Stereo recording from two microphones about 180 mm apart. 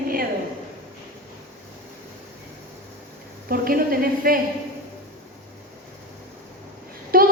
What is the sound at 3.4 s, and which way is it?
Speech, 55° right (ahead or behind).